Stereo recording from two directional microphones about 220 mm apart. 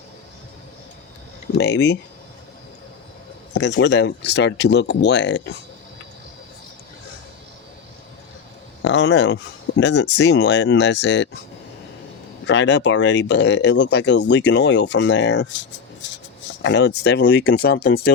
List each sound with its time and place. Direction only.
1.5 s speech: 50° left (ahead or behind)
3.5 s speech: 55° left (ahead or behind)
8.8 s speech: 55° left (ahead or behind)
12.5 s speech: 55° left (ahead or behind)